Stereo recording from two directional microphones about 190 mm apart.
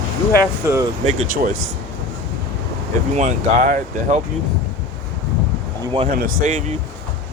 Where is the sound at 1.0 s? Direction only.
40° right (ahead or behind).